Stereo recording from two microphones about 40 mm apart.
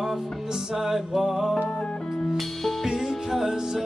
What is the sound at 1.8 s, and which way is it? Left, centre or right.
Music, left.